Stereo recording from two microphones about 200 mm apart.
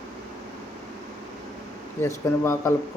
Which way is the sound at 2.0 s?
10° left (ahead or behind).